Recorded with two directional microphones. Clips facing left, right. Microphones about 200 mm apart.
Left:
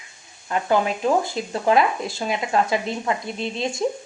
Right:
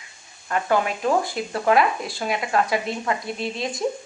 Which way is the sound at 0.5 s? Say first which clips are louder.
Left 1 dB; 20° left (ahead or behind).